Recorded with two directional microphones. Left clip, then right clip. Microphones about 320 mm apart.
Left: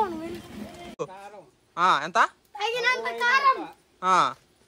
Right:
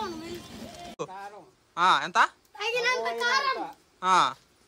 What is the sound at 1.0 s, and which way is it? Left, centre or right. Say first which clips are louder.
A child's voice: left 2 dB; centre.